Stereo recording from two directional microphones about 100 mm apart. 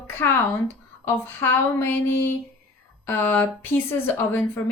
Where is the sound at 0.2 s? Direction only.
25° left (ahead or behind).